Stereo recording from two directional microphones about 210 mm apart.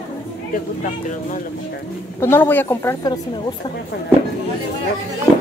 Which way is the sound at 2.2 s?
10° left (ahead or behind).